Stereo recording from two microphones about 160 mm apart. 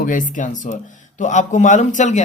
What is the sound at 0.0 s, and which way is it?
Speech, 55° left (ahead or behind).